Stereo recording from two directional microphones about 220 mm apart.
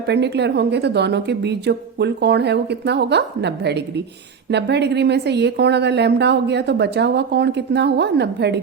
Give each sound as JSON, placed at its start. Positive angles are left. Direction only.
{"t": 0.1, "sound": "a woman's voice", "side_deg": -50}